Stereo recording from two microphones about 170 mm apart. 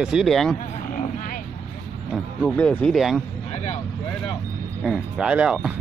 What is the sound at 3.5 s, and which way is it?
Vehicle, 40° left (ahead or behind).